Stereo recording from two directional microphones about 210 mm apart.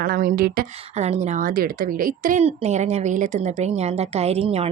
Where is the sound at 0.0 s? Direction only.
40° right (ahead or behind).